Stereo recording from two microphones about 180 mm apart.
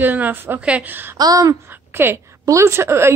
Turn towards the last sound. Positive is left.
turn(degrees=-15)  # may be behind; listen again after turning